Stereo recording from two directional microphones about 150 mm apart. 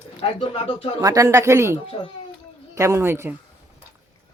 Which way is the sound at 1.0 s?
20° right (ahead or behind).